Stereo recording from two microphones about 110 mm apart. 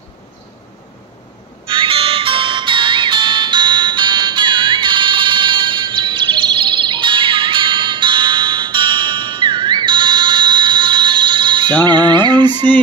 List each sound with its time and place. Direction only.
1.7 s music: 55° right (ahead or behind)